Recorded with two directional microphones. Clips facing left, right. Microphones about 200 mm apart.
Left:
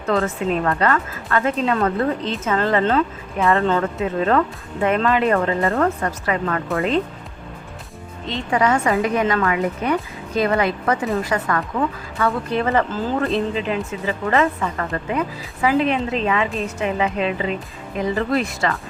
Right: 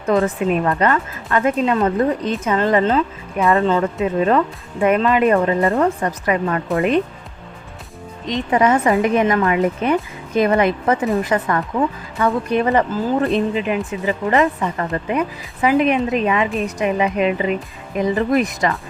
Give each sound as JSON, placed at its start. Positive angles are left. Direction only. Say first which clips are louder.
{"t": 0.0, "sound": "speech", "louder": "right 3 dB", "side_deg": -15}
{"t": 2.8, "sound": "speech", "louder": "right 1 dB", "side_deg": -5}
{"t": 4.0, "sound": "a woman's voice", "louder": "right 2 dB", "side_deg": -15}
{"t": 8.3, "sound": "a woman's voice", "louder": "right 3 dB", "side_deg": -20}